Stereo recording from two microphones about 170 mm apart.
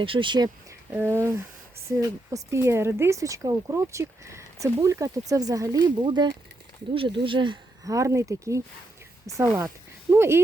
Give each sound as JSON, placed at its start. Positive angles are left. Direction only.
{"t": 0.0, "sound": "speech", "side_deg": -30}
{"t": 0.9, "sound": "speech", "side_deg": -15}